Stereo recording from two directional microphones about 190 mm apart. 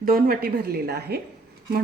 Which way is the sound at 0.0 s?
50° right (ahead or behind).